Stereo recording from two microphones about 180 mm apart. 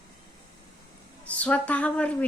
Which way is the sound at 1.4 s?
10° left (ahead or behind).